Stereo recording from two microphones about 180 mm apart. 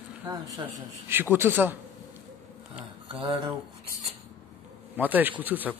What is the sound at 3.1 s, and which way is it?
Speech, 25° right (ahead or behind).